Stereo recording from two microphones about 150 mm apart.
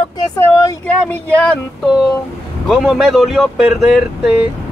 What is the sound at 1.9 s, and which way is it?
Speech, 5° right (ahead or behind).